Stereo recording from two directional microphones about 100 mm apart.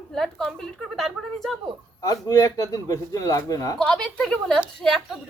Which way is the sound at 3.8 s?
10° left (ahead or behind).